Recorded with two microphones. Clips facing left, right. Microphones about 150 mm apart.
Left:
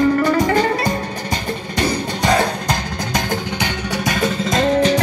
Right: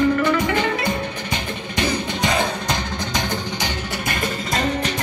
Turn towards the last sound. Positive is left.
turn(degrees=90)